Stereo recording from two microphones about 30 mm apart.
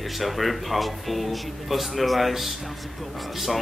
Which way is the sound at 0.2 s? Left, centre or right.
Centre.